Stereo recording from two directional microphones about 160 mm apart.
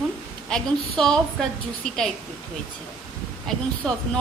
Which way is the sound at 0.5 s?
5° left (ahead or behind).